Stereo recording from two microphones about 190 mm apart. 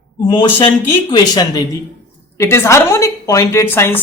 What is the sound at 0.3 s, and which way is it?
Speech, 25° left (ahead or behind).